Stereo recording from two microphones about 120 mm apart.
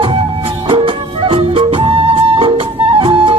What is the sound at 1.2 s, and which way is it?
Music, 50° right (ahead or behind).